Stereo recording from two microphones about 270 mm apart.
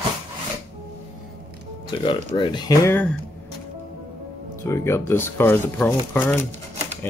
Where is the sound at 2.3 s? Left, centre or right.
Centre.